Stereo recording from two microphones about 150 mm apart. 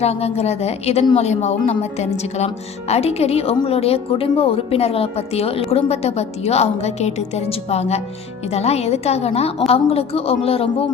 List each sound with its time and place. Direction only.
0.0 s a woman's voice: 45° left (ahead or behind)